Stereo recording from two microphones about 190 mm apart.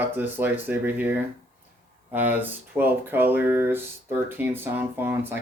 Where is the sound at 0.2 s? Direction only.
10° right (ahead or behind).